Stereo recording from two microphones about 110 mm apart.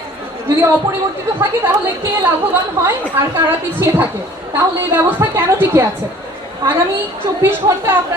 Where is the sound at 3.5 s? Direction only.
20° right (ahead or behind).